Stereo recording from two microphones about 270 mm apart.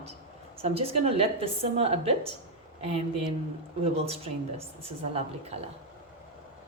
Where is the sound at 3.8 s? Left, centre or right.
Right.